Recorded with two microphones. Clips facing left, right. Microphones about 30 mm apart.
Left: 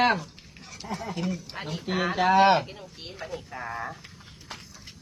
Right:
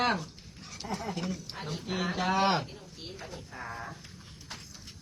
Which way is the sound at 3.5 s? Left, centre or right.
Left.